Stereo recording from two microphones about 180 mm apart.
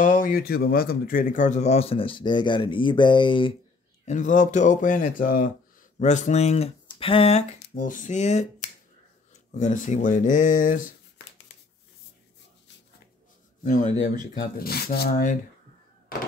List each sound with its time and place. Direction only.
0.0 s speech: 50° left (ahead or behind); by 3.5 s 25° left (ahead or behind)
4.0 s speech: 45° left (ahead or behind)
7.7 s speech: 45° left (ahead or behind)
13.7 s speech: 45° left (ahead or behind)
14.6 s speech: 60° left (ahead or behind)